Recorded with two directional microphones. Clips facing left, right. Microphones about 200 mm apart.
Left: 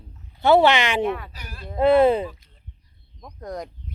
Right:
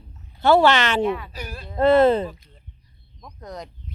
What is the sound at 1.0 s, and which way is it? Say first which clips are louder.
Speech: right 2 dB; 50° left (ahead or behind).